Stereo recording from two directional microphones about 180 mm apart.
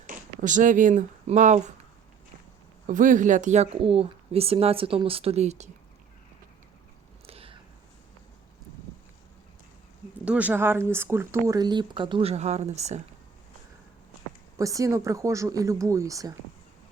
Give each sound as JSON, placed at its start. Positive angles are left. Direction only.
{"t": 0.1, "sound": "speech", "side_deg": -45}
{"t": 2.8, "sound": "speech", "side_deg": -45}
{"t": 7.3, "sound": "a sound", "side_deg": -30}
{"t": 10.2, "sound": "speech", "side_deg": -10}
{"t": 14.6, "sound": "speech", "side_deg": -20}